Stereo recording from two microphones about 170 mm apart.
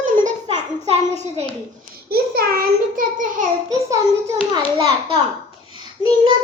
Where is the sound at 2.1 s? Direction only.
60° right (ahead or behind).